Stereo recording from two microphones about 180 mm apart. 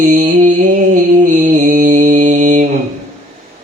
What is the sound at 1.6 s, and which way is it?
Mantra, 50° right (ahead or behind).